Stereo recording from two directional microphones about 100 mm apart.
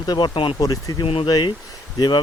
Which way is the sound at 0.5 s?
35° left (ahead or behind).